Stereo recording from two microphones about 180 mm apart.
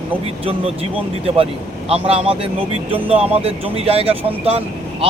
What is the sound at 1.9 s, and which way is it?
Speech, 35° right (ahead or behind).